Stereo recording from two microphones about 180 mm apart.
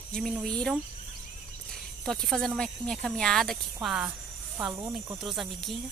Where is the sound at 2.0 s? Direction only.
Centre (ahead or behind).